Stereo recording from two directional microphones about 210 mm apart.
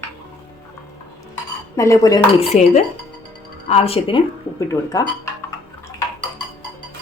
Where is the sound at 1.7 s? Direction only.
15° left (ahead or behind).